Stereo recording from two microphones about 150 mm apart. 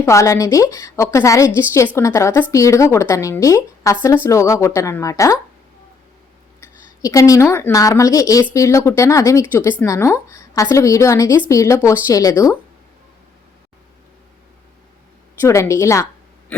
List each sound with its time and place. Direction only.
0.0 s speech: 20° left (ahead or behind)
6.6 s a woman's voice: 25° left (ahead or behind)
15.4 s speech: 20° left (ahead or behind)